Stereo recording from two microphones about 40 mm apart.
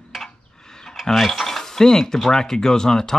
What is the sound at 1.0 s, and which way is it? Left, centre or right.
Mechanisms, centre.